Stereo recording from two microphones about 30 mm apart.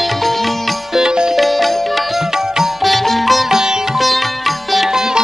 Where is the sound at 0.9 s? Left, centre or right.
Right.